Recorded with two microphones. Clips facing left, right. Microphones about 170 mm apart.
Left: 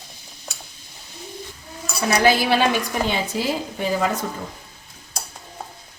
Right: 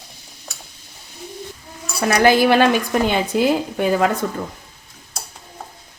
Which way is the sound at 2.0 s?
50° right (ahead or behind).